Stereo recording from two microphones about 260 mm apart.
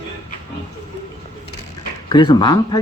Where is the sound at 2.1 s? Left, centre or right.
Centre.